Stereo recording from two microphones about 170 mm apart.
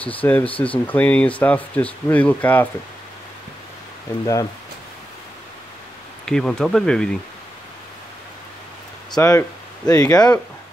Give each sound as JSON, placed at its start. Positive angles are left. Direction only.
{"t": 0.0, "sound": "speech", "side_deg": 10}
{"t": 6.2, "sound": "speech", "side_deg": 5}
{"t": 9.1, "sound": "speech", "side_deg": 20}